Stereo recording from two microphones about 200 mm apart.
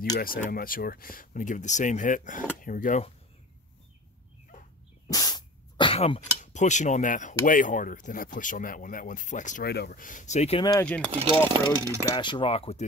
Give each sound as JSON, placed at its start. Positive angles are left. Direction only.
{"t": 0.2, "sound": "speech", "side_deg": 45}
{"t": 4.5, "sound": "a sound", "side_deg": 40}
{"t": 5.1, "sound": "speech", "side_deg": 20}
{"t": 9.7, "sound": "speech", "side_deg": 50}
{"t": 10.6, "sound": "speech", "side_deg": 20}
{"t": 11.5, "sound": "speech", "side_deg": -15}
{"t": 12.2, "sound": "speech", "side_deg": 25}